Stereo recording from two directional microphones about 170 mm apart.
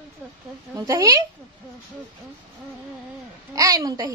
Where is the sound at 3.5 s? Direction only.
20° right (ahead or behind).